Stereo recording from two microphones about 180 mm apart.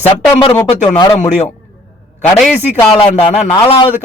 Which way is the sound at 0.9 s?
20° left (ahead or behind).